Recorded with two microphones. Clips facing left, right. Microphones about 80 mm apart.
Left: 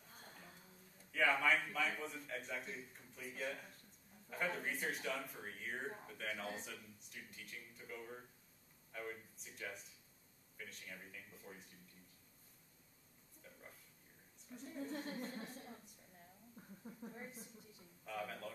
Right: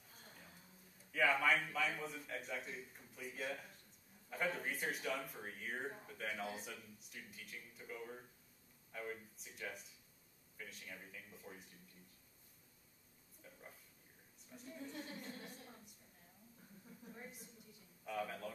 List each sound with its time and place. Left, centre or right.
1.1 s a man's voice: centre
13.4 s a sound: centre
14.6 s a woman's voice: left
16.8 s speech: left
18.0 s a man's voice: centre